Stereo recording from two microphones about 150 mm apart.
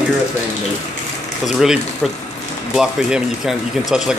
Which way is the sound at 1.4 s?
5° right (ahead or behind).